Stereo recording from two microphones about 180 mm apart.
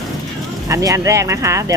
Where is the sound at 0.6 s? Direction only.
15° right (ahead or behind).